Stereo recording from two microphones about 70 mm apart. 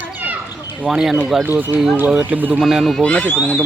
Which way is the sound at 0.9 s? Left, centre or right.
Centre.